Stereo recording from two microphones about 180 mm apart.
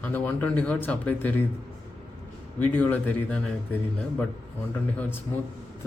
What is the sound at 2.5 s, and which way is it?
Speech, 10° left (ahead or behind).